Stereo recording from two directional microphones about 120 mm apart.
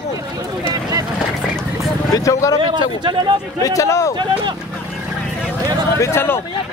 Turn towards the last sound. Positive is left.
turn(degrees=20)  # may be behind; listen again after turning